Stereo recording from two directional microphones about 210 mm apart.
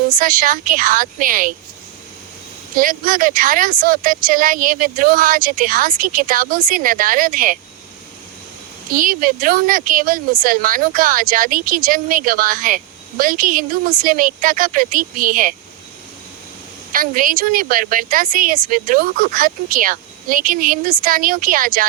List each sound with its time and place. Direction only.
0.1 s speech: 40° right (ahead or behind)
2.7 s speech: 40° right (ahead or behind)
8.9 s speech: 40° right (ahead or behind)
16.9 s speech: 40° right (ahead or behind)